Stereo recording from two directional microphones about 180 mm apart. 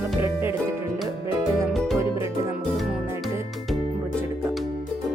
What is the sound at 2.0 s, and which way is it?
Music, 15° right (ahead or behind).